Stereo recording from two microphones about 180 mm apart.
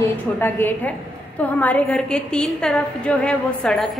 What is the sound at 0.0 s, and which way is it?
A woman's voice, 10° left (ahead or behind).